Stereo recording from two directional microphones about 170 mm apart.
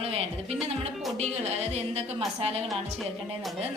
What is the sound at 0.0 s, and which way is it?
Music, 35° right (ahead or behind).